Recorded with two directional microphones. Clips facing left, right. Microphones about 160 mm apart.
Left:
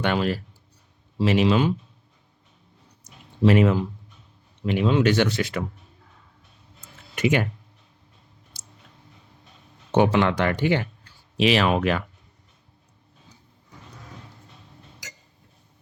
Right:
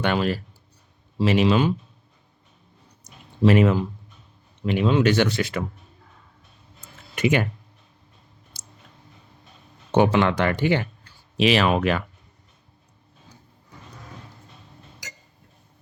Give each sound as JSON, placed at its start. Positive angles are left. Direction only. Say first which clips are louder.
{"t": 0.0, "sound": "speech", "louder": "right 1 dB", "side_deg": -50}
{"t": 3.2, "sound": "speech", "louder": "right 1 dB", "side_deg": -50}
{"t": 6.9, "sound": "a sound", "louder": "right 1 dB", "side_deg": -50}
{"t": 8.5, "sound": "clicking", "louder": "right 1 dB", "side_deg": -50}
{"t": 9.9, "sound": "speech", "louder": "right 1 dB", "side_deg": -50}
{"t": 13.9, "sound": "dog", "louder": "right 1 dB", "side_deg": -50}